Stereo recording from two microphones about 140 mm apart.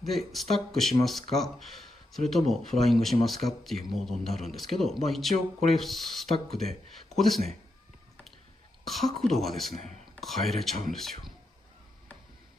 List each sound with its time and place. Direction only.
0.0 s speech: centre (ahead or behind)
7.2 s speech: centre (ahead or behind)
8.8 s speech: centre (ahead or behind)